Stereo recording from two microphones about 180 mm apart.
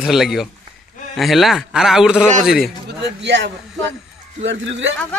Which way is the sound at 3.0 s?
75° right (ahead or behind).